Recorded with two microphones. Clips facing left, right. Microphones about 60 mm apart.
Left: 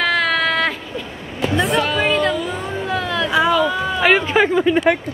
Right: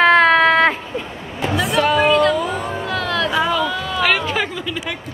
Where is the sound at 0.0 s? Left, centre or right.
Right.